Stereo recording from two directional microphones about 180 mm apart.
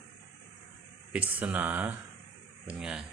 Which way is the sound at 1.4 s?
10° right (ahead or behind).